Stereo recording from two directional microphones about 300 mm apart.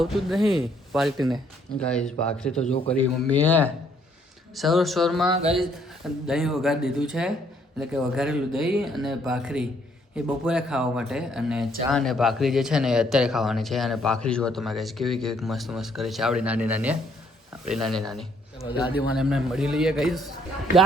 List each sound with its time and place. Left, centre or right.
0.0 s speech: centre
5.3 s speech: centre
6.2 s speech: centre